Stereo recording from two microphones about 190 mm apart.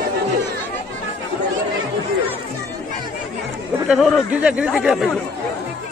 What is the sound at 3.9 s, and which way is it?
Speech, centre (ahead or behind).